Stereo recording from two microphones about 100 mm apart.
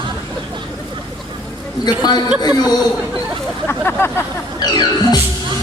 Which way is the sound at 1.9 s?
45° left (ahead or behind).